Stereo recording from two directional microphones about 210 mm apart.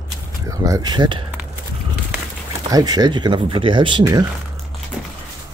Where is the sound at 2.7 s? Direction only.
20° right (ahead or behind).